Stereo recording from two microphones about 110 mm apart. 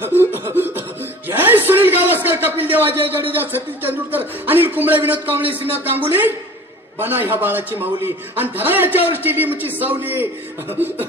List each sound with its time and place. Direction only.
0.0 s chuckle: 20° right (ahead or behind)
1.3 s a man's voice: 20° right (ahead or behind)